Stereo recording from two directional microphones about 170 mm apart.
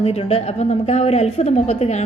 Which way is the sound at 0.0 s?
35° left (ahead or behind).